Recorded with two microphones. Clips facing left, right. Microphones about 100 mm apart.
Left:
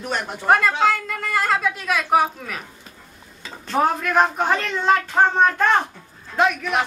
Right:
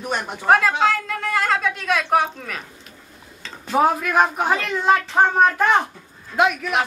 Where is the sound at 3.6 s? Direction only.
10° right (ahead or behind).